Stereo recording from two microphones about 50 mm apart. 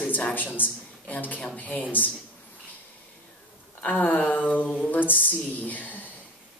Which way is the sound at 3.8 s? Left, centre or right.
Left.